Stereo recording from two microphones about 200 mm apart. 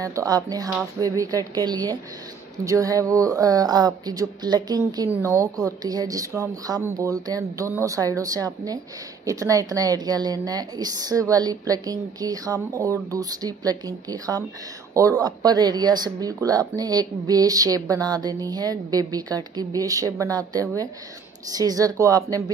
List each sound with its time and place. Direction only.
0.0 s speech: 15° right (ahead or behind)